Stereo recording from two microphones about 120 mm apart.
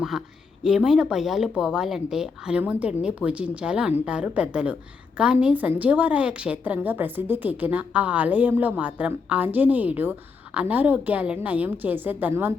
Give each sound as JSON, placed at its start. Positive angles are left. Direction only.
{"t": 0.6, "sound": "speech", "side_deg": -5}